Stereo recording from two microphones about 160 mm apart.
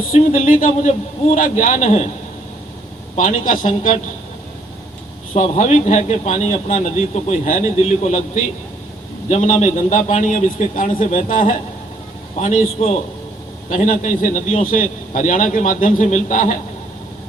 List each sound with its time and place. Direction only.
0.1 s speech: 55° left (ahead or behind)
3.2 s speech: 55° left (ahead or behind)
5.3 s a man's voice: 50° left (ahead or behind)